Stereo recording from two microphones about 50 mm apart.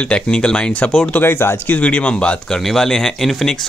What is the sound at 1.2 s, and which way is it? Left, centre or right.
Speech, left.